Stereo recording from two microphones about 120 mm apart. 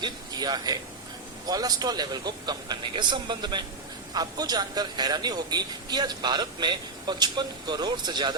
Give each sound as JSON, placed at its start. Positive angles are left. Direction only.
{"t": 0.0, "sound": "a man's voice", "side_deg": -35}